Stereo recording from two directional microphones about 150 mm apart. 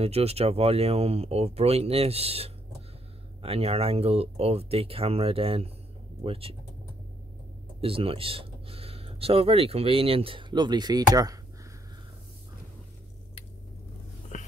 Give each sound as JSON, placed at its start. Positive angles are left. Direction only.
{"t": 0.0, "sound": "speech", "side_deg": -45}
{"t": 7.8, "sound": "speech", "side_deg": -40}
{"t": 14.3, "sound": "a sound", "side_deg": 55}